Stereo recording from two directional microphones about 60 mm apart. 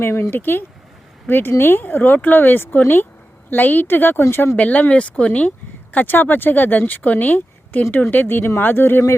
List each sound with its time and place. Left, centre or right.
0.0 s speech: left
4.2 s speech: left
4.5 s speech: left